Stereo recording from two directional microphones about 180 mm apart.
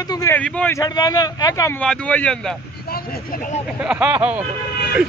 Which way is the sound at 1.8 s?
5° left (ahead or behind).